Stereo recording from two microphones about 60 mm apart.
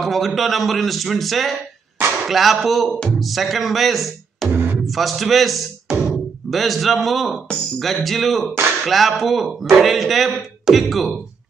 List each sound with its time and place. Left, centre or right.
0.0 s speech: centre
2.9 s speech: centre
3.2 s speech: centre
4.5 s music: right
4.8 s speech: centre